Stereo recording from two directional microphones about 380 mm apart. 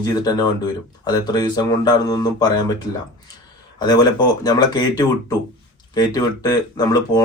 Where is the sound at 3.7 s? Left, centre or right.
Centre.